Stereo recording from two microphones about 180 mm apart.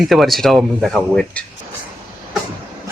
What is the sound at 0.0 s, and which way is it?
Speech, centre (ahead or behind).